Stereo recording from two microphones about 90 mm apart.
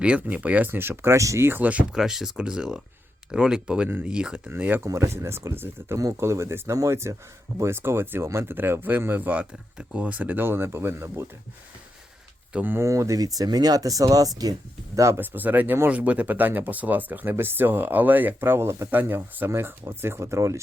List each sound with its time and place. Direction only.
0.0 s speech: 15° right (ahead or behind); by 1.5 s 35° right (ahead or behind)
1.5 s speech: 20° right (ahead or behind)
2.0 s speech: 5° right (ahead or behind)
4.5 s speech: 20° right (ahead or behind)
4.9 s speech: 35° right (ahead or behind)
12.5 s speech: 20° right (ahead or behind)
12.8 s speech: 35° right (ahead or behind)
15.2 s speech: 20° right (ahead or behind)